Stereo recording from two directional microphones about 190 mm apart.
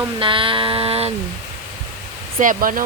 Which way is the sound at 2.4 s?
45° right (ahead or behind).